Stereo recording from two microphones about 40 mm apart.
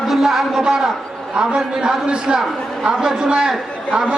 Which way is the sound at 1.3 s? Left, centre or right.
Right.